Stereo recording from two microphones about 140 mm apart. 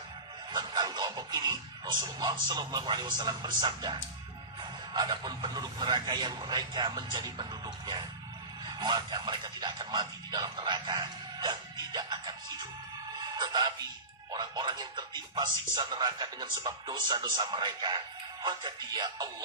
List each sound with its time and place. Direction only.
0.5 s speech: 30° right (ahead or behind)